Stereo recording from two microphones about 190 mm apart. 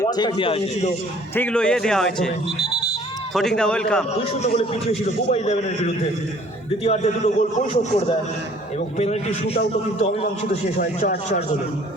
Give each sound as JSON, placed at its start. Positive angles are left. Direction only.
{"t": 0.0, "sound": "a man's voice", "side_deg": 20}
{"t": 1.4, "sound": "speech", "side_deg": 5}
{"t": 2.6, "sound": "a sound", "side_deg": -35}
{"t": 3.3, "sound": "speech", "side_deg": 5}
{"t": 4.3, "sound": "a man's voice", "side_deg": 30}
{"t": 10.8, "sound": "speech", "side_deg": 55}